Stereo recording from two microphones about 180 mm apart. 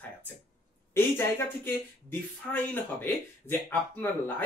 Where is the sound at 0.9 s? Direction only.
15° left (ahead or behind).